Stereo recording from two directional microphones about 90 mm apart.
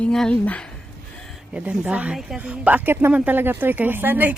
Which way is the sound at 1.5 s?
10° right (ahead or behind).